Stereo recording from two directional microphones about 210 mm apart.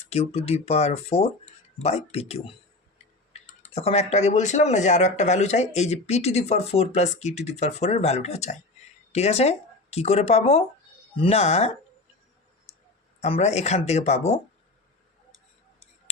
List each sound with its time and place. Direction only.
0.1 s speech: 30° left (ahead or behind)
13.2 s speech: 30° left (ahead or behind)